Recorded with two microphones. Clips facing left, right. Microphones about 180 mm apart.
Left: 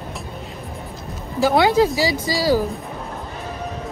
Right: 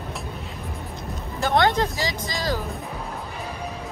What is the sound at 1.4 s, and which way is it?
Speech, centre (ahead or behind).